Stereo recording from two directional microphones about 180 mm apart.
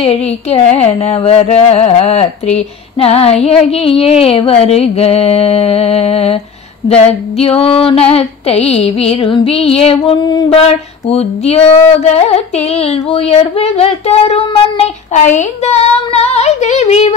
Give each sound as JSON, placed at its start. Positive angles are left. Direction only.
{"t": 0.0, "sound": "female singing", "side_deg": 35}
{"t": 7.4, "sound": "female singing", "side_deg": 30}